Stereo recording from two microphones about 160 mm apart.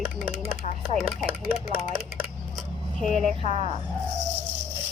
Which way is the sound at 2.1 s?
5° left (ahead or behind).